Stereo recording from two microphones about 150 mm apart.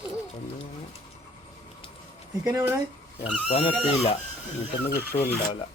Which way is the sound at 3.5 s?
40° left (ahead or behind).